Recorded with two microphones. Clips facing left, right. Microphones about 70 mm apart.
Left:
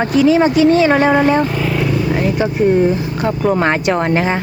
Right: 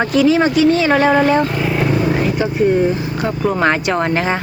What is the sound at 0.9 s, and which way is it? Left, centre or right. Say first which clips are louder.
Speech: left 1 dB; centre.